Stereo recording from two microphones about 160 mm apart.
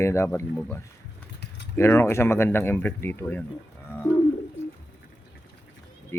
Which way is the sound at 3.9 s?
15° left (ahead or behind).